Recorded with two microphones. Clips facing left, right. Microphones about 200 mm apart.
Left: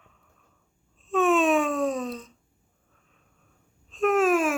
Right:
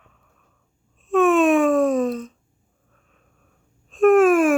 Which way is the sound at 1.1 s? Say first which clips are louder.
Right 5 dB; 55° right (ahead or behind).